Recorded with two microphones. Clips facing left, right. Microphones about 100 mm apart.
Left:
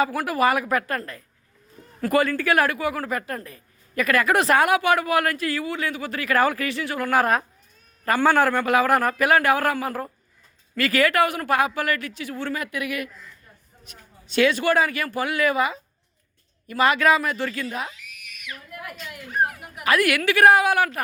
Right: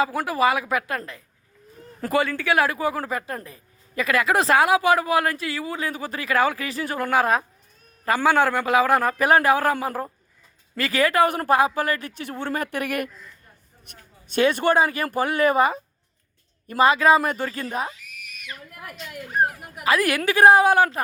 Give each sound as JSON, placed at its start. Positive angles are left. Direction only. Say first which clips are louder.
{"t": 0.0, "sound": "speech", "louder": "even", "side_deg": -20}
{"t": 6.3, "sound": "speech", "louder": "left 1 dB", "side_deg": -20}
{"t": 6.7, "sound": "a woman's voice", "louder": "even", "side_deg": -35}
{"t": 7.1, "sound": "speech", "louder": "even", "side_deg": -15}
{"t": 9.1, "sound": "a woman's voice", "louder": "right 1 dB", "side_deg": -30}
{"t": 14.3, "sound": "speech", "louder": "even", "side_deg": -45}
{"t": 14.7, "sound": "a woman's voice", "louder": "right 1 dB", "side_deg": -30}
{"t": 17.5, "sound": "a sound", "louder": "right 2 dB", "side_deg": -35}
{"t": 19.9, "sound": "a woman's voice", "louder": "even", "side_deg": -35}